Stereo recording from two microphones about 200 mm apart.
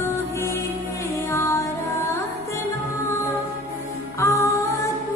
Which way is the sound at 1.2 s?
15° left (ahead or behind).